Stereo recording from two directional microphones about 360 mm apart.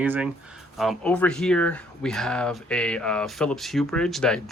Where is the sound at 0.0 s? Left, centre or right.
Centre.